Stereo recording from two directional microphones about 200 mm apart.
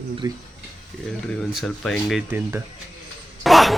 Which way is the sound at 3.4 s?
Centre (ahead or behind).